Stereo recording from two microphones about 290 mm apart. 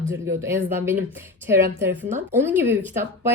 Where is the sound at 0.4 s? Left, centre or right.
Centre.